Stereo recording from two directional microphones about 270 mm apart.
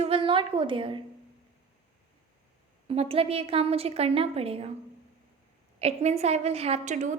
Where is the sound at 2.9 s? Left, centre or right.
Right.